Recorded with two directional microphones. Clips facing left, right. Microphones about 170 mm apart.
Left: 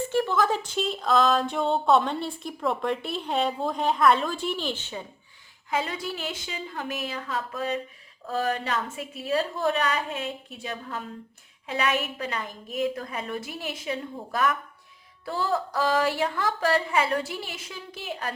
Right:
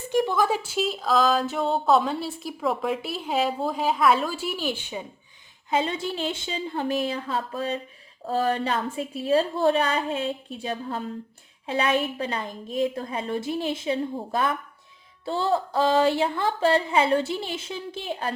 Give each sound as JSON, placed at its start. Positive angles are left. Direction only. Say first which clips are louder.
{"t": 0.1, "sound": "speech", "louder": "right 4 dB", "side_deg": -15}
{"t": 5.7, "sound": "a woman's voice", "louder": "right 4 dB", "side_deg": -25}